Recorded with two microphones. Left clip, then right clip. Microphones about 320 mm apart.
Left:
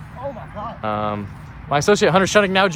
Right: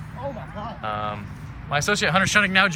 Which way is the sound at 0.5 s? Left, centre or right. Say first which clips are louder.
Left 6 dB; centre.